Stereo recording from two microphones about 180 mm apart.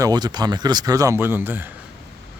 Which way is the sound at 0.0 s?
20° right (ahead or behind).